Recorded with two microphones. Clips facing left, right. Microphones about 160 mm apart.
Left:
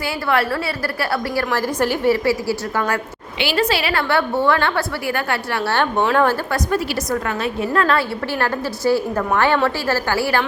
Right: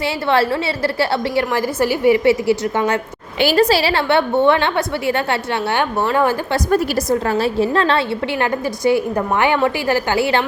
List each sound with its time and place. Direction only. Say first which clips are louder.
0.0 s a woman's voice: right 3 dB; 25° right (ahead or behind)
1.5 s a woman's voice: right 2 dB; 10° right (ahead or behind)
3.4 s a woman's voice: right 5 dB; 40° right (ahead or behind); by 5.8 s 25° right (ahead or behind)
5.8 s a woman's voice: left 1 dB; 5° right (ahead or behind)
6.7 s a woman's voice: right 7 dB; 45° right (ahead or behind)
7.1 s a woman's voice: right 6 dB; 35° right (ahead or behind)